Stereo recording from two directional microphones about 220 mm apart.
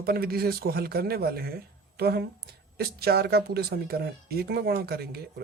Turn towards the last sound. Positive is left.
turn(degrees=-45)  # may be behind; listen again after turning